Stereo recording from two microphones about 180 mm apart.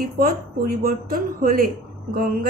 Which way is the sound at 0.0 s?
55° right (ahead or behind).